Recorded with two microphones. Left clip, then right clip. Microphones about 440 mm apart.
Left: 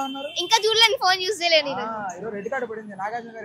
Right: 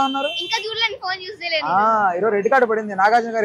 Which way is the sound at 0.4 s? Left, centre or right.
Left.